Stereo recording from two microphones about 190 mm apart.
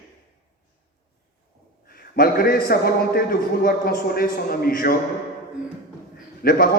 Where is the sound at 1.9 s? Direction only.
50° left (ahead or behind).